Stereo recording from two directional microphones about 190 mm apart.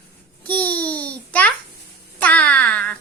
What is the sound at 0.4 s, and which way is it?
Babbling, 10° left (ahead or behind).